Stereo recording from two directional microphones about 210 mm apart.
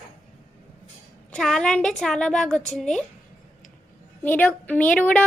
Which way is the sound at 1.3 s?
Centre (ahead or behind).